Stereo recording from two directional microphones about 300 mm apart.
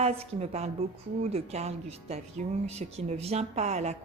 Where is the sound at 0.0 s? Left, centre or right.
Right.